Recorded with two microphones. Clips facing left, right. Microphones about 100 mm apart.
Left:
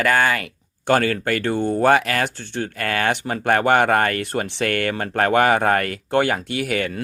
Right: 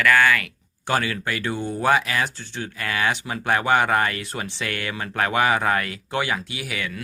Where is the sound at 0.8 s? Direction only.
50° left (ahead or behind).